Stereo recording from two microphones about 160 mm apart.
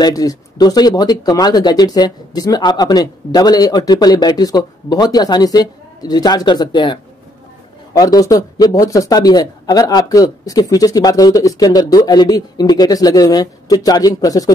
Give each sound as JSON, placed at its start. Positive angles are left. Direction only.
{"t": 0.0, "sound": "speech", "side_deg": 20}